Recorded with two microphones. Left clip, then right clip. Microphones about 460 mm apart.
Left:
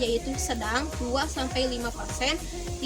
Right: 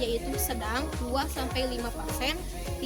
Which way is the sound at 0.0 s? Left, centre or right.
Right.